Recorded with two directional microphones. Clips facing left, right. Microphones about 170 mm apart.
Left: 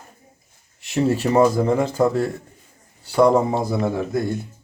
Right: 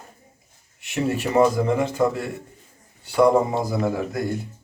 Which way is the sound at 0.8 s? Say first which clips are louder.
Left 4 dB; 30° left (ahead or behind).